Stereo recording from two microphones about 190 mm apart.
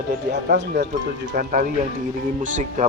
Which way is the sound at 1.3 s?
45° right (ahead or behind).